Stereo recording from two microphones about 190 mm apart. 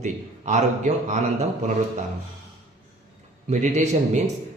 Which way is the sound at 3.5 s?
40° right (ahead or behind).